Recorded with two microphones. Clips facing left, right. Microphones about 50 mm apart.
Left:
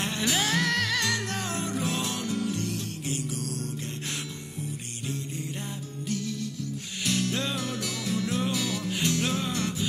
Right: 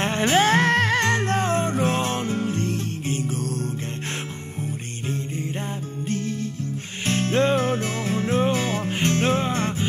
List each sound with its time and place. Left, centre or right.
0.0 s music: right
6.0 s music: right